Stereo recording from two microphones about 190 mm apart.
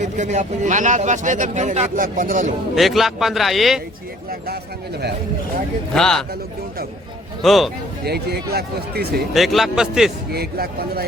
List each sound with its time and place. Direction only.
0.0 s speech: 40° right (ahead or behind)
2.7 s speech: centre (ahead or behind)
5.9 s speech: 5° left (ahead or behind)
7.4 s speech: centre (ahead or behind)
8.0 s speech: 60° right (ahead or behind)
9.3 s speech: centre (ahead or behind)
10.3 s speech: 55° right (ahead or behind)